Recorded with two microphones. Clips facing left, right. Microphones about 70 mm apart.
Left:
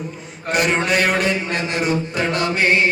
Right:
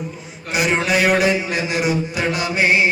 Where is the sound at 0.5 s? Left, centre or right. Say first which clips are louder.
Even; centre.